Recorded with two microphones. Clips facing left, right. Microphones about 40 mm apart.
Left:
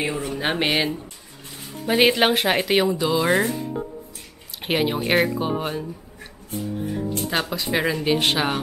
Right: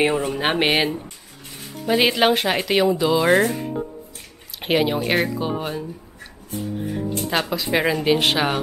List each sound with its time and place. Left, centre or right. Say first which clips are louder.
0.0 s speech: right 6 dB; right
0.4 s speech: right 1 dB; right
1.9 s speech: even; centre
3.4 s speech: right 2 dB; right
4.6 s speech: right 3 dB; centre
7.2 s speech: right 4 dB; centre